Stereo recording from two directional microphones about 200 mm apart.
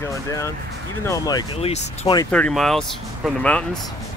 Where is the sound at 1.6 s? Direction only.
30° left (ahead or behind).